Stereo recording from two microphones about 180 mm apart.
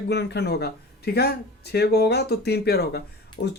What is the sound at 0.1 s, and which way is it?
A man's voice, 70° left (ahead or behind).